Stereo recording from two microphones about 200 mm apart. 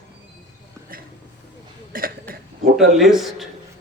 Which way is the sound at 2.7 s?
Centre (ahead or behind).